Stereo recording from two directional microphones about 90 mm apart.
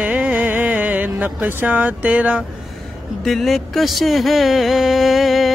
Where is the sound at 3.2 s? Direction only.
Centre (ahead or behind).